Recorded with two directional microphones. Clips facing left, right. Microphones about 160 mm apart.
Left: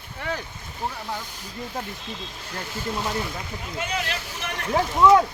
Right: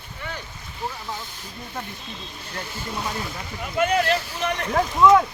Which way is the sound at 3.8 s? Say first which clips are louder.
Right 10 dB; 50° right (ahead or behind).